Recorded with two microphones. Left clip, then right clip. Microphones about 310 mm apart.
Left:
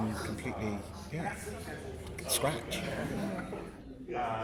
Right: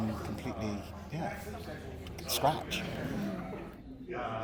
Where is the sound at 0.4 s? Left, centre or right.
Centre.